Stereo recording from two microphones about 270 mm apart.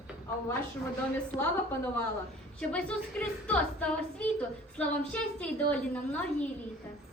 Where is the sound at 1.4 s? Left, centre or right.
Centre.